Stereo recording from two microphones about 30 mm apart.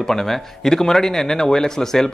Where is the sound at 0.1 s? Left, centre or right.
Centre.